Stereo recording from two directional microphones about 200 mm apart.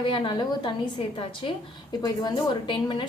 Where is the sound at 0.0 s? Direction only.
25° left (ahead or behind).